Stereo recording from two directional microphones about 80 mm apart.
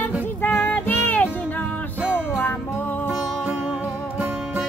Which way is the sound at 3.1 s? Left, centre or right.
Centre.